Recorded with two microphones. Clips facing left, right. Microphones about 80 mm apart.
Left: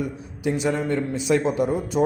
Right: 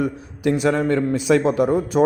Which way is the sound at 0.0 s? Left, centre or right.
Right.